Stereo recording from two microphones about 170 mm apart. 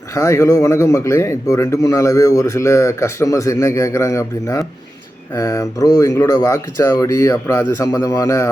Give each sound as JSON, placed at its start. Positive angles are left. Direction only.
{"t": 0.1, "sound": "speech", "side_deg": 15}